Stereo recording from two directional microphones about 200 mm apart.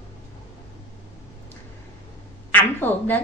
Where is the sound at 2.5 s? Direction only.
10° left (ahead or behind).